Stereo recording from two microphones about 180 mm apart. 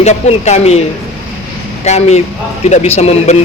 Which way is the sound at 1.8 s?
40° left (ahead or behind).